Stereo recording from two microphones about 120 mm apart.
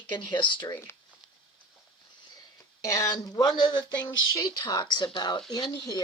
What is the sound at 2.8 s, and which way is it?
Speech, 30° left (ahead or behind).